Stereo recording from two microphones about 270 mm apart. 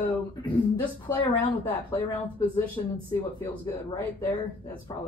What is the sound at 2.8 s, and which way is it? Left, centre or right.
Speech, centre.